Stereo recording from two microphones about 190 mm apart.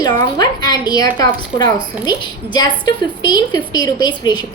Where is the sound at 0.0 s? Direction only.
20° left (ahead or behind).